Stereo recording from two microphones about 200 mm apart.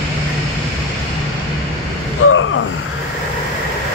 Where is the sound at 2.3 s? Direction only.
85° left.